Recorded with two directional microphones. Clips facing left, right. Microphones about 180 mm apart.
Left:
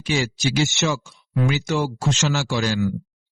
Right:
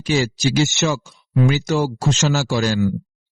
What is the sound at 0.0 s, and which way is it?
Speech, 40° right (ahead or behind).